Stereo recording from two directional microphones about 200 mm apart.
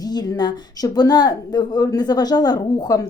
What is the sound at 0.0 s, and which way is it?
Speech, 20° left (ahead or behind).